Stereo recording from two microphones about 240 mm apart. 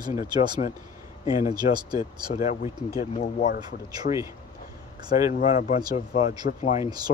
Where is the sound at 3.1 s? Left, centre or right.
Left.